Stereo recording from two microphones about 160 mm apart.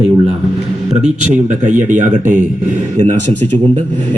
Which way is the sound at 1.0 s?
50° right (ahead or behind).